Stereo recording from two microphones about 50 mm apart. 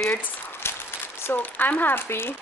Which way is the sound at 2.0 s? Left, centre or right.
Left.